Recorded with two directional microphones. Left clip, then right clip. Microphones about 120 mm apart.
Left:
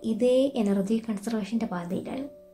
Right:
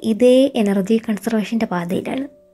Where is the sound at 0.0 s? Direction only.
45° right (ahead or behind).